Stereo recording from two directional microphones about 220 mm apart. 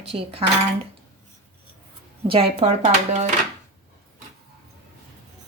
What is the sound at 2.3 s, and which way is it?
Speech, 25° right (ahead or behind).